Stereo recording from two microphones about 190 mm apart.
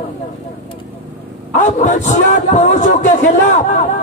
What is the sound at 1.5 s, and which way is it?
A man's voice, 40° left (ahead or behind).